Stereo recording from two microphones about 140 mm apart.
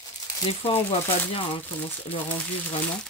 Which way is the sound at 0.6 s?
45° left (ahead or behind).